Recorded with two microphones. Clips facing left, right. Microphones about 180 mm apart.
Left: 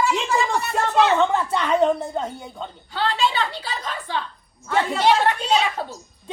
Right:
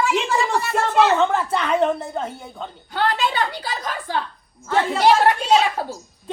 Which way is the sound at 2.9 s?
50° right (ahead or behind).